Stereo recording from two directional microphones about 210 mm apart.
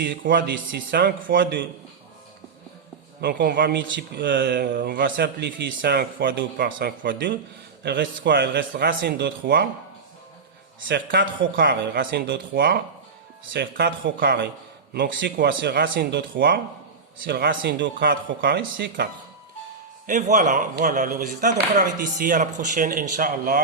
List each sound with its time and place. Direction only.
0.0 s a man's voice: 55° right (ahead or behind)
3.2 s speech: 50° right (ahead or behind)
3.9 s speech: 55° right (ahead or behind)
10.8 s a man's voice: 55° right (ahead or behind)
11.2 s speech: 45° right (ahead or behind)
20.1 s speech: 35° right (ahead or behind)